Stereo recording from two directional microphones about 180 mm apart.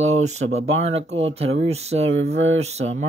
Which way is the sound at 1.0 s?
90° right.